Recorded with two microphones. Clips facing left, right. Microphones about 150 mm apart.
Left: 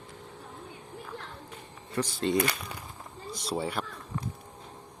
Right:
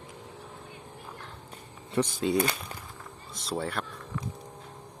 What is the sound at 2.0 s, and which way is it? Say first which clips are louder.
Speech: right 4 dB; 20° right (ahead or behind).